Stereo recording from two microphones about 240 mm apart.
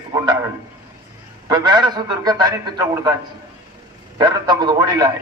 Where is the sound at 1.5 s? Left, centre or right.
Centre.